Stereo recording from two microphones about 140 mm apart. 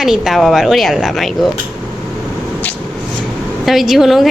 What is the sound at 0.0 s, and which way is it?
A woman's voice, centre (ahead or behind).